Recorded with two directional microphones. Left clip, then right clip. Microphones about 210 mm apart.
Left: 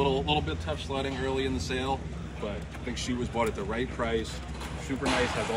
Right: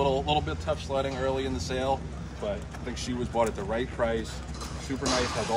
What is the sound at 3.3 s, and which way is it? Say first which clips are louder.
Speech: right 4 dB; 40° right (ahead or behind).